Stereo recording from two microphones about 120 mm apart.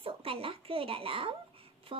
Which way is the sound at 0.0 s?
50° right (ahead or behind).